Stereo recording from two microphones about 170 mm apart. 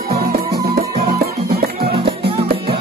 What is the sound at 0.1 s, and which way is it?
Music, 65° right (ahead or behind).